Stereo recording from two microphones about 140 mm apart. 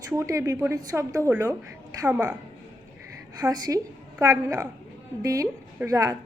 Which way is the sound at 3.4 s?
25° right (ahead or behind).